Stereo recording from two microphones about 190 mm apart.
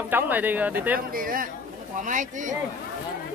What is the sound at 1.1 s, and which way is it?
A man's voice, 50° right (ahead or behind).